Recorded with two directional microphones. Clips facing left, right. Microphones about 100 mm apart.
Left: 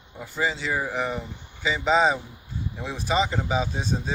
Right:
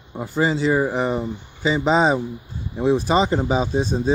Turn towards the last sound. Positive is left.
turn(degrees=-35)  # may be behind; listen again after turning